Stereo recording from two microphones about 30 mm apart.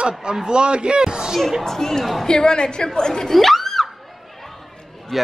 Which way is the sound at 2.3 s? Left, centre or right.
Left.